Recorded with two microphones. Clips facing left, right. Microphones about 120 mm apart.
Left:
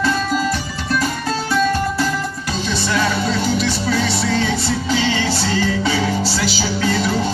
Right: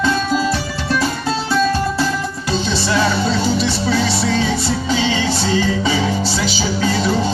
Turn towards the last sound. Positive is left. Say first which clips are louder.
# right 1 dB
turn(degrees=-20)  # may be behind; listen again after turning